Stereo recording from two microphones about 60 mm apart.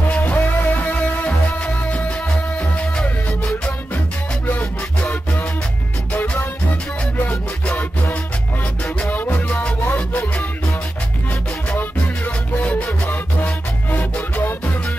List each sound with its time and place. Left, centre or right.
0.1 s music: left
7.6 s music: left
13.0 s music: left